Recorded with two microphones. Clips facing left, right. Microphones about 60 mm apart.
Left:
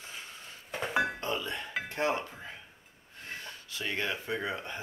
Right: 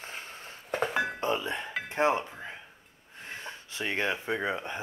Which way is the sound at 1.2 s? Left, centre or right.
Right.